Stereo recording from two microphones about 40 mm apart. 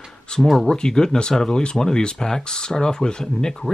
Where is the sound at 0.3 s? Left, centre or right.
Left.